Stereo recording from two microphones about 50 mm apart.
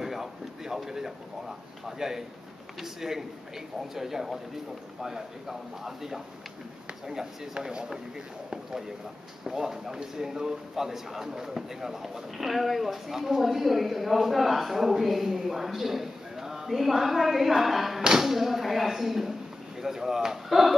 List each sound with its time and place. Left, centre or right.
0.0 s a sound: centre
1.9 s speech: centre
9.4 s speech: centre